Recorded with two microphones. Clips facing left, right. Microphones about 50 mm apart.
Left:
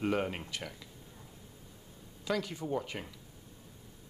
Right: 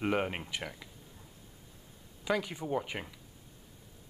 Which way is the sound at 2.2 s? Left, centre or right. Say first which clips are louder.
Right 2 dB; centre.